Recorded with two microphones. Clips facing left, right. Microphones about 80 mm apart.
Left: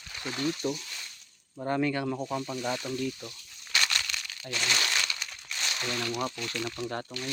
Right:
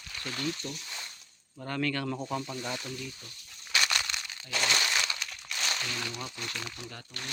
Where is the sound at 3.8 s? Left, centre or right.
Centre.